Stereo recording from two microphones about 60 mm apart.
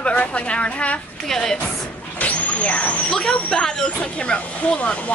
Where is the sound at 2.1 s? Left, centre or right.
Left.